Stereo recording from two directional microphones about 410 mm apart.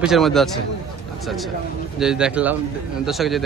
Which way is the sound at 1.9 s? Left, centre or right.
Centre.